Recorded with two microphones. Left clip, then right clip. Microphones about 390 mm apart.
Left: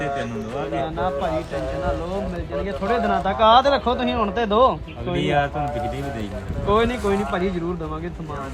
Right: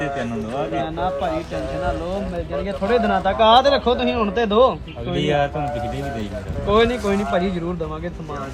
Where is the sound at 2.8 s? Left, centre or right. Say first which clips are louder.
Right 3 dB; centre.